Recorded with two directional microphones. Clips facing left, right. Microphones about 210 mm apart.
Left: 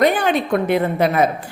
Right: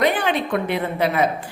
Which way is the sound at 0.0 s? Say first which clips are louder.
Left 3 dB; 45° left (ahead or behind).